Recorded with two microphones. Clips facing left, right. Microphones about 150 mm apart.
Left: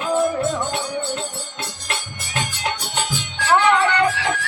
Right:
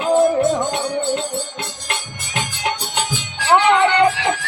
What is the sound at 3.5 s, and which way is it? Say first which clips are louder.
Music: right 3 dB; 25° right (ahead or behind).